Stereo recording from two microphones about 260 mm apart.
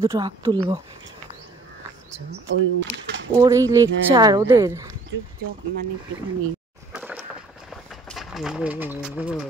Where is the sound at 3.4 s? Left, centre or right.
Centre.